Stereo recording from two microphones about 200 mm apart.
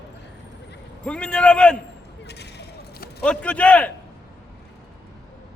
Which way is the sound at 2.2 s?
55° left (ahead or behind).